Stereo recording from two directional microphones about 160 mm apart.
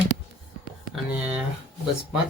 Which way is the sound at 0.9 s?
10° right (ahead or behind).